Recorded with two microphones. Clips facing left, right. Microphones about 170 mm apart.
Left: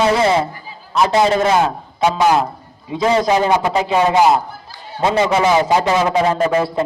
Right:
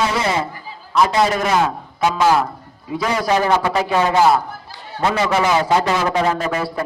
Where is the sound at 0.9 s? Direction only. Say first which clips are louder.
Left 2 dB; 25° left (ahead or behind).